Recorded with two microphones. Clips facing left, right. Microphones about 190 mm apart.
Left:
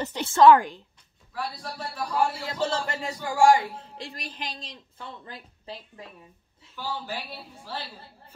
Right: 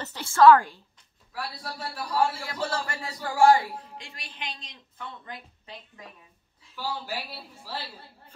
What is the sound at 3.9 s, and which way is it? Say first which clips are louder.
A woman's voice: left 5 dB; 35° left (ahead or behind).